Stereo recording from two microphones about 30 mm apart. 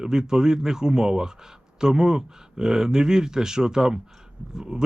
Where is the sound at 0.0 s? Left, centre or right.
Right.